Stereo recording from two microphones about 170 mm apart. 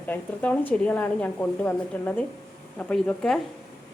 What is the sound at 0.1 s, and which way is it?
A woman's voice, 10° left (ahead or behind).